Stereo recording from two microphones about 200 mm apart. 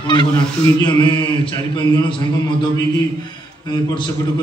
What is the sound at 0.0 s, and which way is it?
Speech, 25° left (ahead or behind).